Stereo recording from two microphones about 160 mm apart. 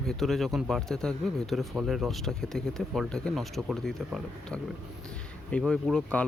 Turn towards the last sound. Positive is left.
turn(degrees=5)  # may be behind; listen again after turning